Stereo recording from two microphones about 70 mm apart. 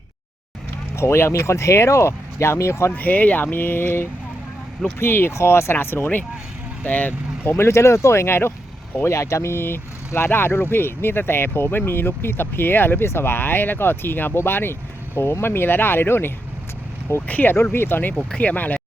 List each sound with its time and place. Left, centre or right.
0.9 s speech: left
2.9 s speech: left
7.5 s speech: left